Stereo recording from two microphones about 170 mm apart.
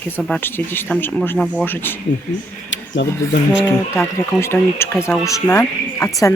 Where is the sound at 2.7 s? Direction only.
90° left.